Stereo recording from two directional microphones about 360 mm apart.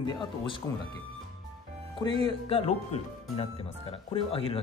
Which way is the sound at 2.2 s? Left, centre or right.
Centre.